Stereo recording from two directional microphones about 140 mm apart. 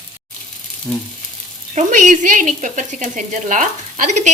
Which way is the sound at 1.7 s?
65° right (ahead or behind).